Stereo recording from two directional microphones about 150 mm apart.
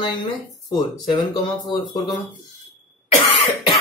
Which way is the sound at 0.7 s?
30° left (ahead or behind).